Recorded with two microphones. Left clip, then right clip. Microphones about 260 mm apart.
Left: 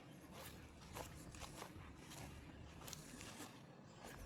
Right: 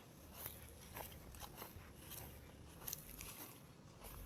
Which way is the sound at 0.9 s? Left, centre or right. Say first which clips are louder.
Left 1 dB; right.